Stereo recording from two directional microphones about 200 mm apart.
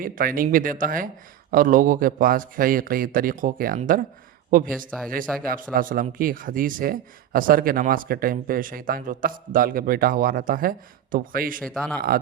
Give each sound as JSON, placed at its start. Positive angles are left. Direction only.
{"t": 0.0, "sound": "speech", "side_deg": -45}
{"t": 5.4, "sound": "speech", "side_deg": -45}
{"t": 11.6, "sound": "speech", "side_deg": 5}